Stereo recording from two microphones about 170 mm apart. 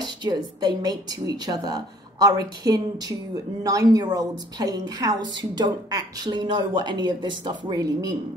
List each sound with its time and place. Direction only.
0.0 s a woman's voice: 25° right (ahead or behind)